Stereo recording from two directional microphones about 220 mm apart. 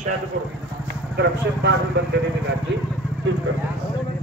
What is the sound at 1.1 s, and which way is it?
Speech, 50° right (ahead or behind).